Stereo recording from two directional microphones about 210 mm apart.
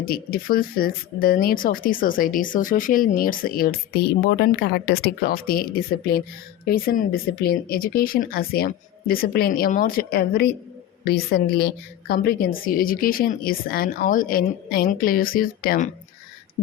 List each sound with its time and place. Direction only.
0.0 s speech: 45° left (ahead or behind)
6.7 s speech: 45° left (ahead or behind)